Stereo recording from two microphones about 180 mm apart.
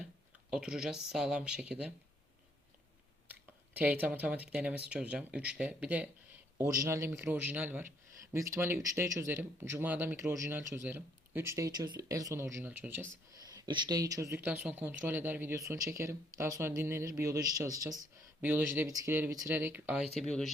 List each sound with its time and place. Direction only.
0.5 s speech: 5° right (ahead or behind)
3.2 s speech: 10° right (ahead or behind)
13.4 s speech: 20° right (ahead or behind)
20.1 s speech: 5° left (ahead or behind)